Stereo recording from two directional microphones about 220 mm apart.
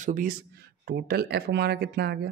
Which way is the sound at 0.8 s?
45° right (ahead or behind).